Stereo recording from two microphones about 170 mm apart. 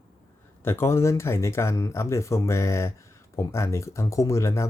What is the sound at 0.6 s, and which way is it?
Speech, 15° left (ahead or behind).